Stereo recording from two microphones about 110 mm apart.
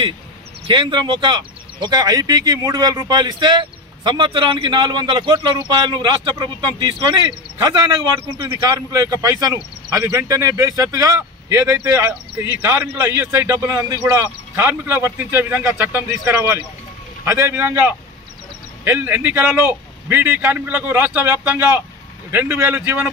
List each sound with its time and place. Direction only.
0.7 s speech: 45° right (ahead or behind)
8.3 s speech: 25° right (ahead or behind)
14.5 s speech: 20° right (ahead or behind)
18.9 s a man's voice: 15° right (ahead or behind)